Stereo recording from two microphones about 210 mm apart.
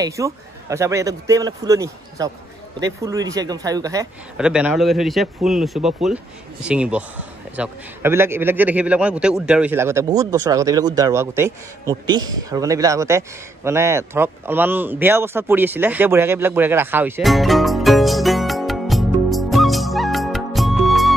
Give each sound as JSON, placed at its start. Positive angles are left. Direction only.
{"t": 0.0, "sound": "a man's voice", "side_deg": -15}
{"t": 4.4, "sound": "a man's voice", "side_deg": -5}
{"t": 13.7, "sound": "a sound", "side_deg": -10}